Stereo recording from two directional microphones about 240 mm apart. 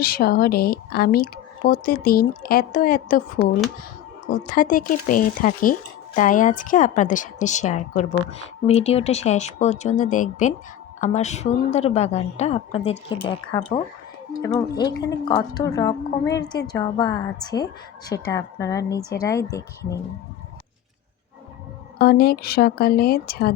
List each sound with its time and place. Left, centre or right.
0.0 s a woman's voice: left
4.3 s a woman's voice: left; by 20.0 s centre
21.9 s a woman's voice: left